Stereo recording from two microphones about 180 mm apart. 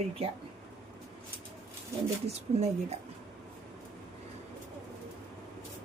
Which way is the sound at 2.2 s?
35° right (ahead or behind).